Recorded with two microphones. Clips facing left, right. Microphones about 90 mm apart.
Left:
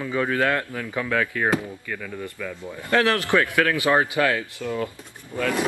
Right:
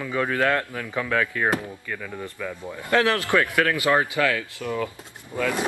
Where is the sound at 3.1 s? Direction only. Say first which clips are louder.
Left 1 dB; 20° left (ahead or behind).